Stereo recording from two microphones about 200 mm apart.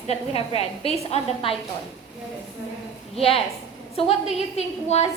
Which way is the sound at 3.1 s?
30° left (ahead or behind).